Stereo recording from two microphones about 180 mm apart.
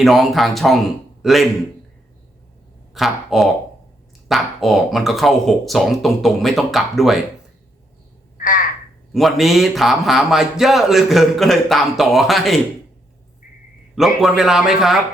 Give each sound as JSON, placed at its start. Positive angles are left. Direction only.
{"t": 0.0, "sound": "a man's voice", "side_deg": 0}
{"t": 2.9, "sound": "speech", "side_deg": 0}
{"t": 8.4, "sound": "crow", "side_deg": 50}
{"t": 9.1, "sound": "speech", "side_deg": 0}
{"t": 13.9, "sound": "speech", "side_deg": 0}